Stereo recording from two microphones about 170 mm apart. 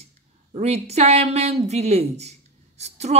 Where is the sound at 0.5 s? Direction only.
40° right (ahead or behind).